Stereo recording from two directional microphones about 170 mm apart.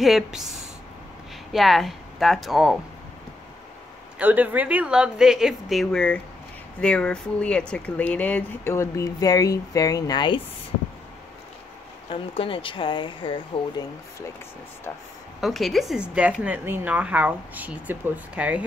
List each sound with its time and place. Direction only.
0.0 s a woman's voice: centre (ahead or behind)
4.2 s a woman's voice: 10° right (ahead or behind); by 10.4 s 25° left (ahead or behind)
12.1 s speech: 30° left (ahead or behind)
15.4 s speech: centre (ahead or behind)